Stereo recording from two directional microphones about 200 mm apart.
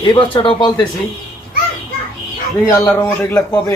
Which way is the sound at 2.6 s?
15° left (ahead or behind).